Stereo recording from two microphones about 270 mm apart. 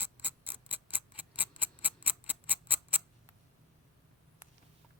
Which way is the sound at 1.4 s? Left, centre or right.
Centre.